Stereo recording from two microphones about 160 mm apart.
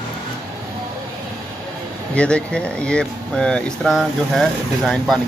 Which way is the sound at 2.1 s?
5° left (ahead or behind).